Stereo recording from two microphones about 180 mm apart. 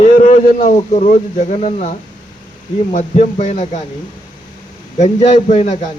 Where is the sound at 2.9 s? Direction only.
45° left (ahead or behind).